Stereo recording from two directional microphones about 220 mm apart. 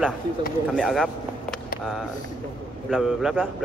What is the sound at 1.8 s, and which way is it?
Speech, centre (ahead or behind).